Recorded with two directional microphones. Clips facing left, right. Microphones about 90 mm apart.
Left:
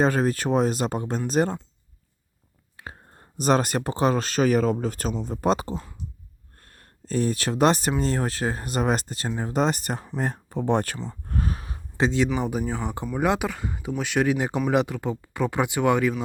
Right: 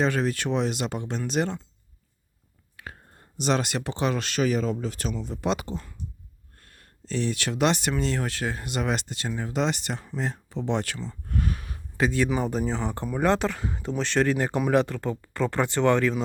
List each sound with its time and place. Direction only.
0.0 s speech: 40° left (ahead or behind)
2.7 s whispering: 25° left (ahead or behind)
3.3 s speech: 40° left (ahead or behind)
10.9 s speech: 15° left (ahead or behind)
11.3 s a sound: 35° left (ahead or behind)
12.4 s speech: 10° left (ahead or behind)